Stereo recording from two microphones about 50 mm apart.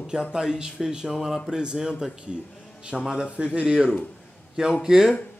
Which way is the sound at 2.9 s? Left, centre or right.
Centre.